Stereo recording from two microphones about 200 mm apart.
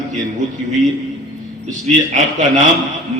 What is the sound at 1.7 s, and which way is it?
Speech, 35° right (ahead or behind).